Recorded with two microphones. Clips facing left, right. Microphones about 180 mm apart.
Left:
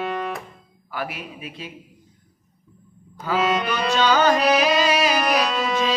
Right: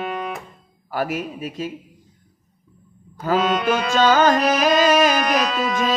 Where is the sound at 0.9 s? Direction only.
45° right (ahead or behind).